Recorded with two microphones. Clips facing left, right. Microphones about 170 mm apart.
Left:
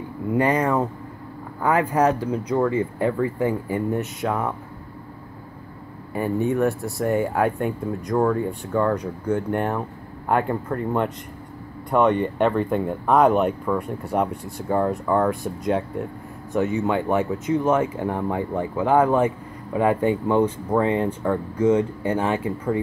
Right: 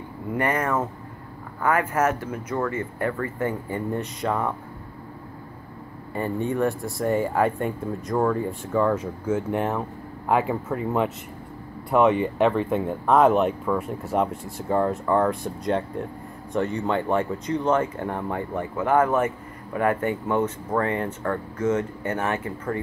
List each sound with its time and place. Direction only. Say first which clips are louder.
0.3 s speech: left 4 dB; 15° left (ahead or behind)
6.1 s speech: left 3 dB; 5° left (ahead or behind)